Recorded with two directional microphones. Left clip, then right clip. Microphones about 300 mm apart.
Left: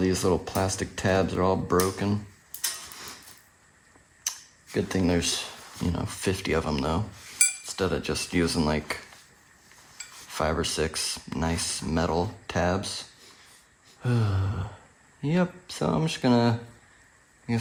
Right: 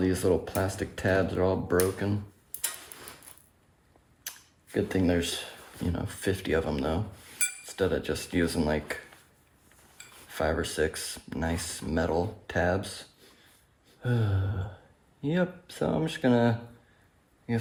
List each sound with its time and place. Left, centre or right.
0.0 s cutlery: left
4.2 s camera: left
5.9 s cutlery: left
10.3 s cutlery: left
14.0 s cutlery: left